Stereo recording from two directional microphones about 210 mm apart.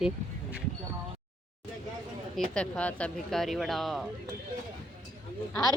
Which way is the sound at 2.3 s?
5° left (ahead or behind).